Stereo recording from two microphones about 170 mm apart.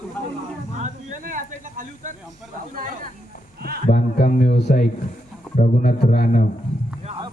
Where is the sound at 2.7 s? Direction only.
50° right (ahead or behind).